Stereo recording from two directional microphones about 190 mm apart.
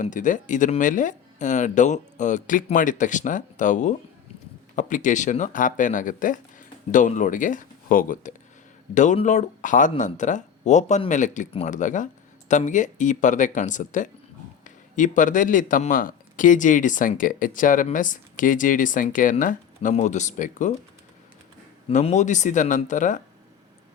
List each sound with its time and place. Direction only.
0.0 s speech: 40° left (ahead or behind)
21.8 s speech: 35° left (ahead or behind)